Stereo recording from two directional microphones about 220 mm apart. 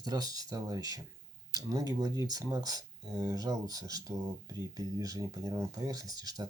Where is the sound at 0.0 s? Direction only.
15° right (ahead or behind).